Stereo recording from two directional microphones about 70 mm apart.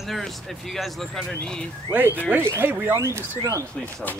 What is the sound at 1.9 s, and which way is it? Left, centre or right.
Speech, right.